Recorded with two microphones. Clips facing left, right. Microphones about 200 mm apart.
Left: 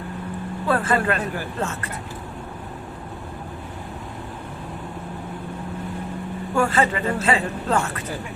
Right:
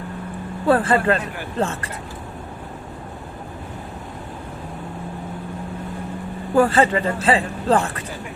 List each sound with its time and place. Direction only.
0.7 s a man's voice: 35° right (ahead or behind)
6.5 s a man's voice: 35° right (ahead or behind)